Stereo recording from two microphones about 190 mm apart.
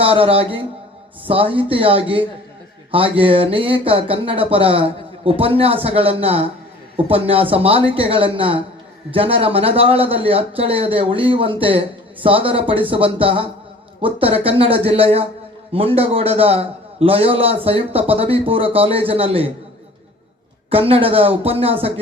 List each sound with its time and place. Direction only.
0.0 s a man's voice: 30° right (ahead or behind)
20.7 s a man's voice: 30° right (ahead or behind)